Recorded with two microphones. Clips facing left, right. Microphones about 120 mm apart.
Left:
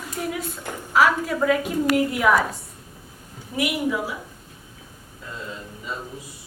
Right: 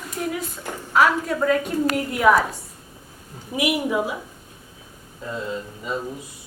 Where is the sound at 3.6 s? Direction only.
20° right (ahead or behind).